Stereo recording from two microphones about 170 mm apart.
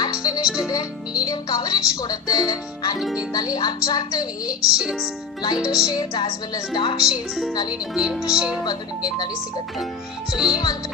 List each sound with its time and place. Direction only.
0.0 s music: 25° left (ahead or behind)
0.4 s speech: 5° right (ahead or behind)
0.7 s speech: 20° left (ahead or behind)
3.0 s speech: centre (ahead or behind)
3.5 s speech: 25° left (ahead or behind)
4.5 s speech: 5° right (ahead or behind)
5.9 s speech: 25° left (ahead or behind)
7.1 s speech: centre (ahead or behind)
8.6 s speech: 25° left (ahead or behind)
10.3 s speech: 5° right (ahead or behind)